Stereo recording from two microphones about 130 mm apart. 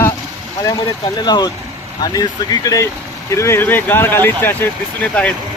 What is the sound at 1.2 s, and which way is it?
Speech, 35° left (ahead or behind).